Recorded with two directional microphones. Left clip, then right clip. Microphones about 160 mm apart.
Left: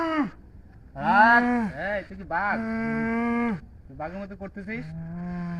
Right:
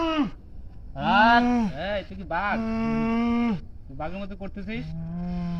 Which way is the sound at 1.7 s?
15° left (ahead or behind).